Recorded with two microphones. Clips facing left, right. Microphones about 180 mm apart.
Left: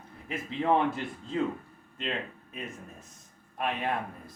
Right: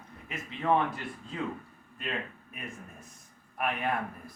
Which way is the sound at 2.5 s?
25° left (ahead or behind).